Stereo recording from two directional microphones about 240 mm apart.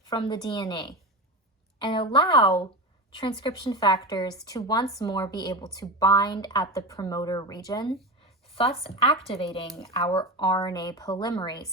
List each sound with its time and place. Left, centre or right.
0.1 s a woman's voice: centre
9.9 s a woman's voice: left